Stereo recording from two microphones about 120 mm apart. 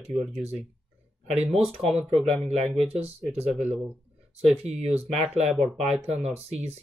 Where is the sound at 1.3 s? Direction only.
60° right (ahead or behind).